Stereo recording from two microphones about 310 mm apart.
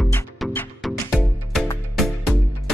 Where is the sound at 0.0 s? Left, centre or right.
Centre.